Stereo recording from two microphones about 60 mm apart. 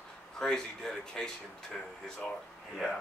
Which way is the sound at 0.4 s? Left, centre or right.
Centre.